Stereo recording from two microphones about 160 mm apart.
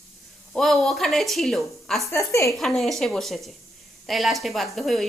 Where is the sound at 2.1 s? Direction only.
15° left (ahead or behind).